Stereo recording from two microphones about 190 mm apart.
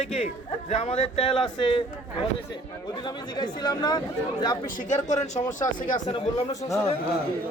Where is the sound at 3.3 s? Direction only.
20° left (ahead or behind).